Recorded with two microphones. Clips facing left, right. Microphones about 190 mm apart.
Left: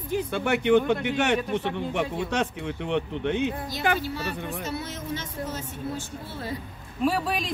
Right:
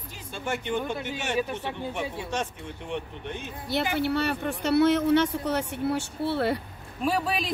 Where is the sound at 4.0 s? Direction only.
65° right (ahead or behind).